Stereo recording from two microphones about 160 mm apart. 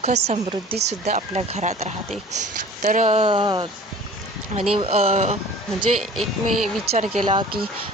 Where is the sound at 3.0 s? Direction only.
35° right (ahead or behind).